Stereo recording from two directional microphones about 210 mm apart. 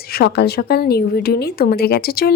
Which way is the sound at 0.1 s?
50° left (ahead or behind).